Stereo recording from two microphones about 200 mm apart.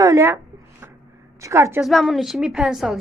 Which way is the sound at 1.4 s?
15° right (ahead or behind).